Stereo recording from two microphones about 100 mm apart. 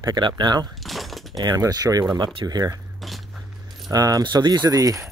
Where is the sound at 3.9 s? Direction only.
40° right (ahead or behind).